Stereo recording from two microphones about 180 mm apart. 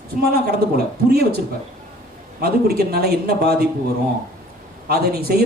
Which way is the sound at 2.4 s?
60° right (ahead or behind).